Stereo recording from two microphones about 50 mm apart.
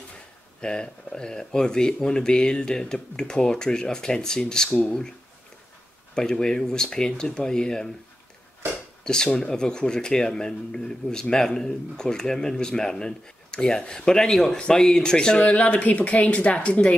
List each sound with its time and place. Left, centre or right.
0.6 s speech: centre
6.1 s speech: centre
9.0 s speech: centre
15.4 s a woman's voice: left